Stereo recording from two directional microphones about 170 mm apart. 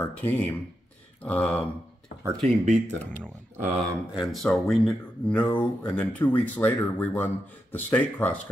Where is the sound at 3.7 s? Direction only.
Centre (ahead or behind).